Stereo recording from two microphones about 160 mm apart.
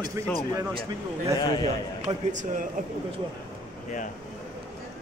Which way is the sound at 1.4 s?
25° left (ahead or behind).